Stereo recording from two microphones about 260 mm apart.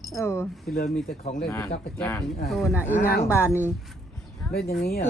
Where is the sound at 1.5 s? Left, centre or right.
Centre.